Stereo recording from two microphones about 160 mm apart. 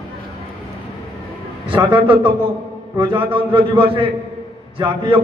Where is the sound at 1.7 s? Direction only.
35° right (ahead or behind).